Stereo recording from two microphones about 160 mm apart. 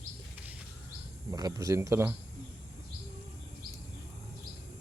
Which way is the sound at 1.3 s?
25° right (ahead or behind).